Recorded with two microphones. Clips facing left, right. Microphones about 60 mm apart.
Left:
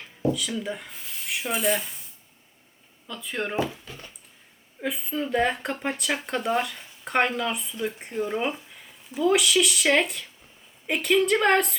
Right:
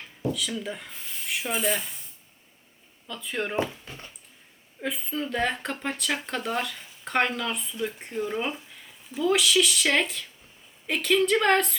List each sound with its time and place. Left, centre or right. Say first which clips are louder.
0.0 s speech: left 4 dB; centre
3.1 s speech: even; centre
3.8 s a sound: even; right
4.8 s speech: left 2 dB; centre